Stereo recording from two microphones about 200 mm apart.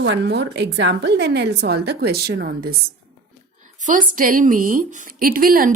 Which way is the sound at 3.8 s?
40° right (ahead or behind).